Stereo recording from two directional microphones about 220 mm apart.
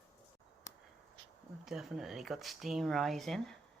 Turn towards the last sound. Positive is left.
turn(degrees=0)  # may be behind; listen again after turning